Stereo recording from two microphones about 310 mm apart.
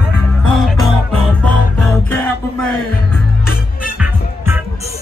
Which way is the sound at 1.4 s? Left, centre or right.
Centre.